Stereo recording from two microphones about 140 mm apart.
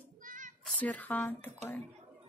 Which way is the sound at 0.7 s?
10° left (ahead or behind).